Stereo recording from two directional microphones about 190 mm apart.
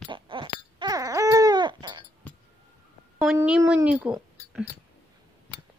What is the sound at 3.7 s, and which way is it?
Speech, 5° right (ahead or behind).